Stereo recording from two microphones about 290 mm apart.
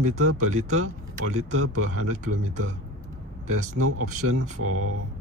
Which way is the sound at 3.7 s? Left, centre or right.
Right.